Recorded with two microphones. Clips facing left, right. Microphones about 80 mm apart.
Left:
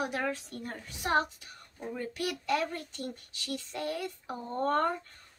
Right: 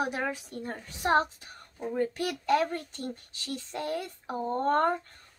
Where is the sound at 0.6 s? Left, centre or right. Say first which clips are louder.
Right 4 dB; right.